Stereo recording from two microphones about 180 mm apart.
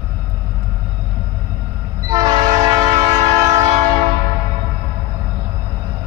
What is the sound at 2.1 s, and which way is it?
Train, 20° right (ahead or behind).